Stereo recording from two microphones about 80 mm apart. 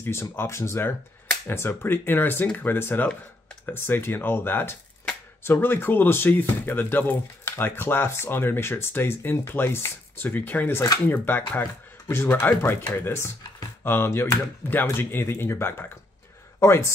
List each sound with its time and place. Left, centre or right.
0.0 s speech: left